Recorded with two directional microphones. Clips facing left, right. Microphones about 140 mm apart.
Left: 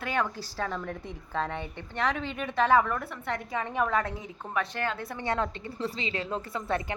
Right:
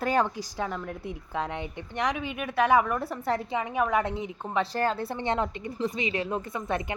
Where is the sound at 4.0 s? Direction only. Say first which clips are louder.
Right 4 dB; 25° right (ahead or behind).